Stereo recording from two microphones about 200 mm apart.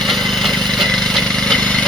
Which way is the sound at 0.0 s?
Centre (ahead or behind).